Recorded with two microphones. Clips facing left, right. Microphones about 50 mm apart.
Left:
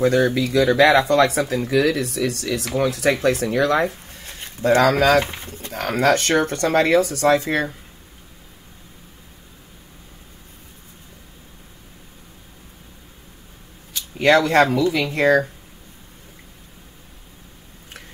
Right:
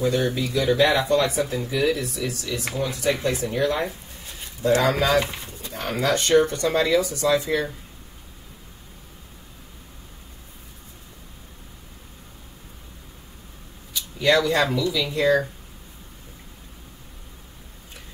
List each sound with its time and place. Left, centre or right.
0.0 s speech: left
5.2 s speech: left
5.8 s speech: left
13.9 s speech: left